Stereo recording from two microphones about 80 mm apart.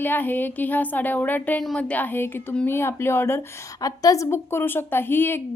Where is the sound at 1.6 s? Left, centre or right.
Centre; by 3.4 s left.